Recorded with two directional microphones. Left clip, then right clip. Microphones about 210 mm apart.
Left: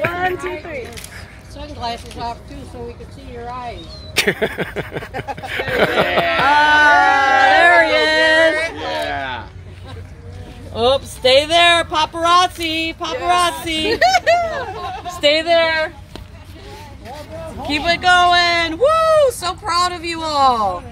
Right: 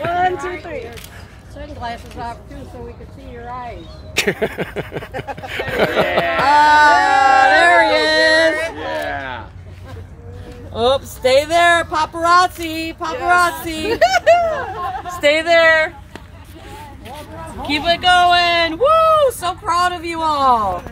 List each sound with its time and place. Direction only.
0.1 s a sound: 45° right (ahead or behind)
1.6 s speech: 35° left (ahead or behind)
4.1 s speech: centre (ahead or behind)
6.3 s music: 5° right (ahead or behind)
8.7 s a sound: 40° left (ahead or behind)
10.7 s speech: centre (ahead or behind)
13.8 s speech: 45° right (ahead or behind)
15.0 s a sound: 5° left (ahead or behind)
15.5 s speech: 15° right (ahead or behind)
17.6 s speech: 50° right (ahead or behind)